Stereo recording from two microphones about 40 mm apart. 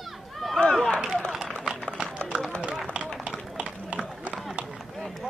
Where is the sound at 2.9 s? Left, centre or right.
Right.